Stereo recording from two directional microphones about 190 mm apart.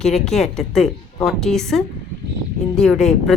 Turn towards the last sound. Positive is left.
turn(degrees=0)  # may be behind; listen again after turning